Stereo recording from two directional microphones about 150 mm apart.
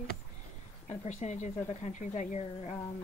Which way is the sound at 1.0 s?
50° left (ahead or behind).